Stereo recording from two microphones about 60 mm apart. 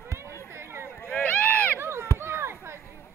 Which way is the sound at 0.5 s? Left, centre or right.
Right.